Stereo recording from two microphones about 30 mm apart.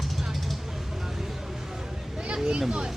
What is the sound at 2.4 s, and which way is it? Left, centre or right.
Vehicle, right.